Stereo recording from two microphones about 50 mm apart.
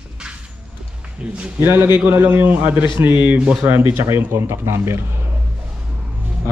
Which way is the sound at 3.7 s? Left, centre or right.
Right.